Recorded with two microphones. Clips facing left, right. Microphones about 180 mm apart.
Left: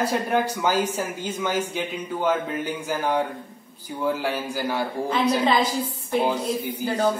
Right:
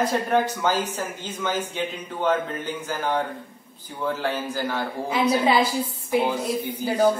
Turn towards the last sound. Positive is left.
turn(degrees=-10)  # may be behind; listen again after turning